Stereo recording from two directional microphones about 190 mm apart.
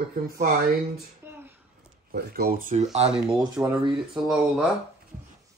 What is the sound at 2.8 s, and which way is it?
Speech, 35° right (ahead or behind).